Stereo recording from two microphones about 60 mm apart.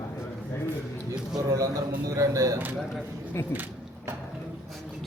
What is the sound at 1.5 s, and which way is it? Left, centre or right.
Speech, right.